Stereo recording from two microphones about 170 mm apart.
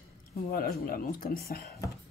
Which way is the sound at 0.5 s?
60° left (ahead or behind).